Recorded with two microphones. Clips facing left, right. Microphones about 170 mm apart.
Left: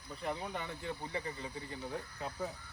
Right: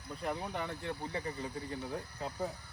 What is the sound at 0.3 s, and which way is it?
Speech, centre (ahead or behind).